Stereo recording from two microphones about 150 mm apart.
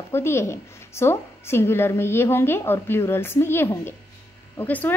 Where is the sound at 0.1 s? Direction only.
15° left (ahead or behind).